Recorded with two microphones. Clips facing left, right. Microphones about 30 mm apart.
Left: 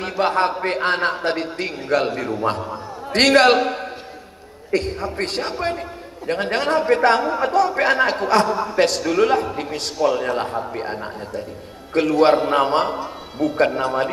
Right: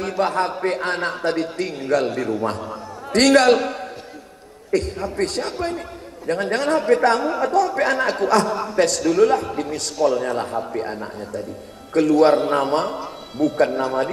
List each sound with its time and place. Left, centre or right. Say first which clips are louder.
0.2 s a man's voice: left 2 dB; left